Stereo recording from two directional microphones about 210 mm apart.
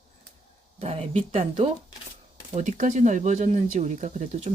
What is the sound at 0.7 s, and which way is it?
Speech, 30° right (ahead or behind).